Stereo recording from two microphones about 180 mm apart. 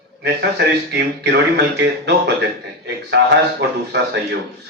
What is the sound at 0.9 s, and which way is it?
Speech, 75° right (ahead or behind).